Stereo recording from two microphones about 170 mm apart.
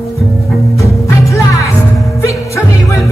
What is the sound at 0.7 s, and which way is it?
Music, 15° left (ahead or behind).